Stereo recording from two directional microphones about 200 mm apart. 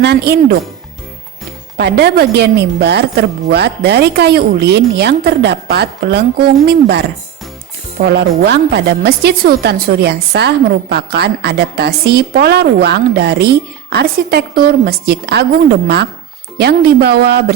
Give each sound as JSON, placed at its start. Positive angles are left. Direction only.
{"t": 0.0, "sound": "a woman's voice", "side_deg": -55}
{"t": 1.8, "sound": "a woman's voice", "side_deg": -55}
{"t": 8.0, "sound": "a woman's voice", "side_deg": -55}